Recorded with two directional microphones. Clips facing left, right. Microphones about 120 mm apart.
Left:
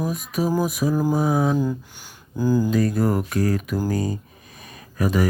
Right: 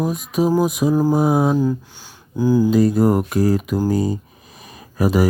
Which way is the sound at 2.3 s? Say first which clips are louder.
Right 4 dB; 15° right (ahead or behind).